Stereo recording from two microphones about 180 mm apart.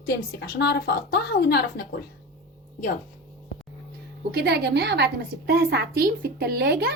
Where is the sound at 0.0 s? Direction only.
65° left (ahead or behind).